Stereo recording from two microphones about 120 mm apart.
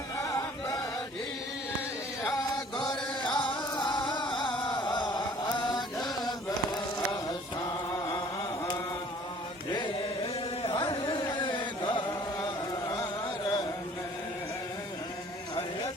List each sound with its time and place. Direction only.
0.2 s chant: 30° left (ahead or behind)
3.3 s music: 40° left (ahead or behind)
4.6 s chant: 40° left (ahead or behind)
7.9 s a sound: 35° left (ahead or behind)
9.6 s chant: 40° left (ahead or behind)
10.6 s carnatic music: 45° left (ahead or behind)
12.9 s a sound: 35° left (ahead or behind)